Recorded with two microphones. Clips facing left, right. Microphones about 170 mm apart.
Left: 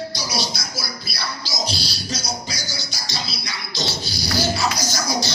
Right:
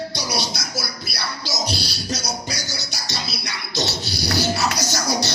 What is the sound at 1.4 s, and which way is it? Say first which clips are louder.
Music: right 3 dB; 60° right (ahead or behind).